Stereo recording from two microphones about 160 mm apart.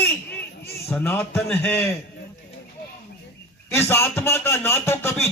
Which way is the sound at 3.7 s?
15° left (ahead or behind).